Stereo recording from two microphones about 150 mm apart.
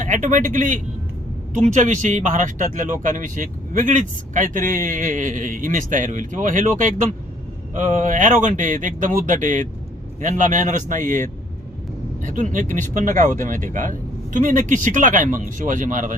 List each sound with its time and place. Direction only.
0.0 s speech: 60° right (ahead or behind)